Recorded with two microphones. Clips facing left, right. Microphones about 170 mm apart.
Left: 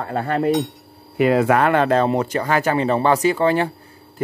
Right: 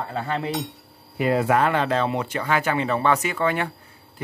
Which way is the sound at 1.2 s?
80° left.